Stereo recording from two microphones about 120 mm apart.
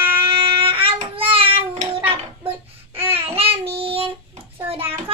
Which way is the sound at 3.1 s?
50° right (ahead or behind).